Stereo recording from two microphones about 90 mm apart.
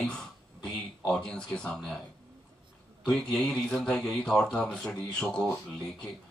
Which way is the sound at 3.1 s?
10° left (ahead or behind).